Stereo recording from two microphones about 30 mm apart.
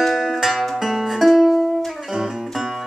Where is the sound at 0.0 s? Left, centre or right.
Centre.